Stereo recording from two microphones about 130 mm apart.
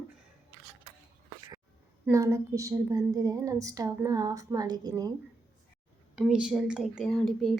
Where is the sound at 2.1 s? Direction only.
25° right (ahead or behind).